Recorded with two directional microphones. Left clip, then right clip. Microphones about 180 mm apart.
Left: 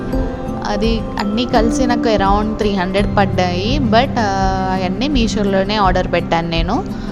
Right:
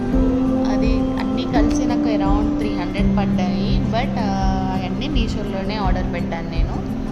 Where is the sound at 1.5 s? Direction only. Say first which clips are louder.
Left 5 dB; 50° left (ahead or behind).